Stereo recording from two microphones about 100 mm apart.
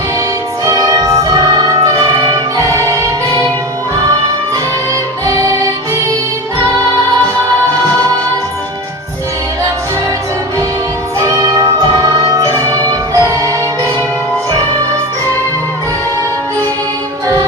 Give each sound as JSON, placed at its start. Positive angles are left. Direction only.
{"t": 0.6, "sound": "music", "side_deg": -35}
{"t": 5.2, "sound": "music", "side_deg": -30}
{"t": 11.2, "sound": "music", "side_deg": -35}